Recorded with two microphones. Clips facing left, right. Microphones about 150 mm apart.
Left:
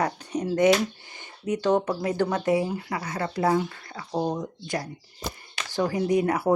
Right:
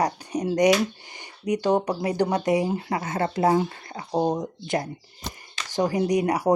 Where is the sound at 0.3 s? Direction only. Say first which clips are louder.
Right 1 dB; 15° right (ahead or behind).